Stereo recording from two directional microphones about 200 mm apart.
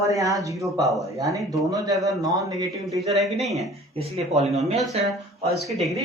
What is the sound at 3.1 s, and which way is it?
Speech, centre (ahead or behind).